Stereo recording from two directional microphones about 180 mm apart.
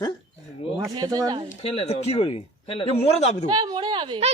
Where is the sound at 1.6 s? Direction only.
35° left (ahead or behind).